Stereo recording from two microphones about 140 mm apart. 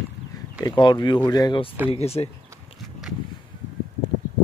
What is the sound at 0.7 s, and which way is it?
Speech, 35° left (ahead or behind).